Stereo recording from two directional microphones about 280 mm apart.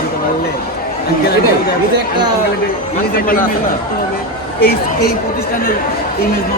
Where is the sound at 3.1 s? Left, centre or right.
Left.